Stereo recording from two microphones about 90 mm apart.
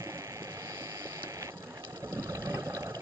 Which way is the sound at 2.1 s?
40° right (ahead or behind).